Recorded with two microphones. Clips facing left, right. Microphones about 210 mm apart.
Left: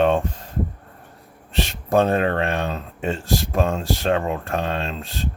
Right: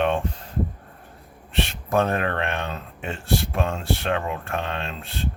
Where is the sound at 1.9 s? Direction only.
30° left (ahead or behind).